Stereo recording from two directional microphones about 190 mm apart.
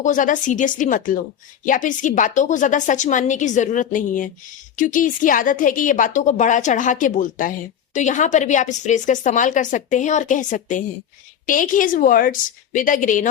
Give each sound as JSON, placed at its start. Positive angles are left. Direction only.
{"t": 0.0, "sound": "a woman's voice", "side_deg": 45}